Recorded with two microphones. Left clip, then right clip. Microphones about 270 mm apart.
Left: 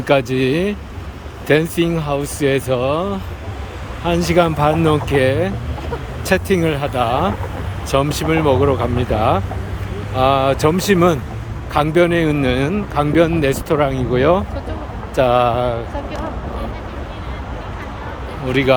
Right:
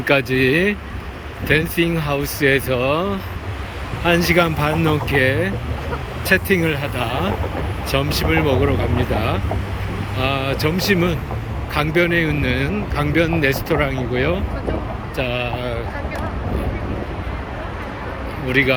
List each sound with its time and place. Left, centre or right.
0.0 s a man's voice: centre
18.4 s a man's voice: centre